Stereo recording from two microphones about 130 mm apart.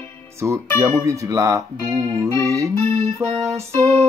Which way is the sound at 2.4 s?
25° right (ahead or behind).